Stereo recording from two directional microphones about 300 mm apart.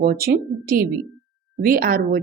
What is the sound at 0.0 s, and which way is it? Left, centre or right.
A woman's voice, right.